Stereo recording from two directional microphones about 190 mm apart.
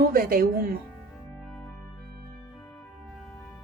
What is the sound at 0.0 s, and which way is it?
Speech, 50° right (ahead or behind).